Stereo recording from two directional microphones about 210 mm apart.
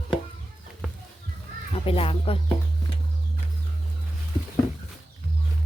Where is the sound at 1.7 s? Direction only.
25° left (ahead or behind).